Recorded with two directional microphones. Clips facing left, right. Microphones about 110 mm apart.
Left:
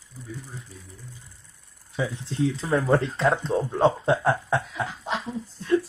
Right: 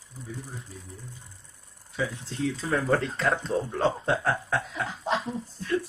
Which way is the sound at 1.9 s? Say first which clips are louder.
Left 4 dB; 15° left (ahead or behind).